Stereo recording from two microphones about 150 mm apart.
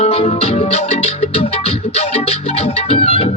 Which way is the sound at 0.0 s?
45° left (ahead or behind).